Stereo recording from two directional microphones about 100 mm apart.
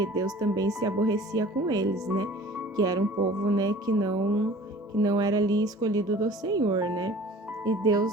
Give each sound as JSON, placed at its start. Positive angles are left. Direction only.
{"t": 0.0, "sound": "a woman's voice", "side_deg": -40}